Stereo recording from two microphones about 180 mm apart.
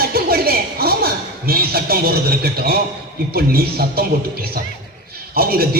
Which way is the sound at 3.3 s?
60° right (ahead or behind).